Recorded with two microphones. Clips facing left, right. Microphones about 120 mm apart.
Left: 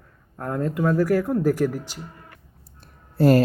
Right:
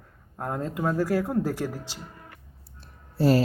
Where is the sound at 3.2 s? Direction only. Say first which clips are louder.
Left 4 dB; 55° left (ahead or behind).